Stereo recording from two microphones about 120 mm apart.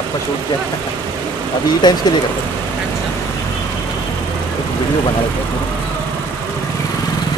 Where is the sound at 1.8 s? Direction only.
35° left (ahead or behind).